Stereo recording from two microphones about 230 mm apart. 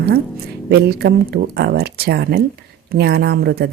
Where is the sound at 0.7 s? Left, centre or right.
Right.